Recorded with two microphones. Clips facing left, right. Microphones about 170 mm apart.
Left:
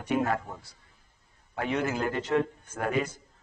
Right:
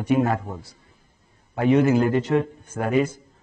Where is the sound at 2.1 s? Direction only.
10° right (ahead or behind).